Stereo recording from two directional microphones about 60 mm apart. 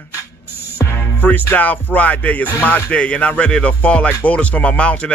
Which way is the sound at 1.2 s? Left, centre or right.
Left.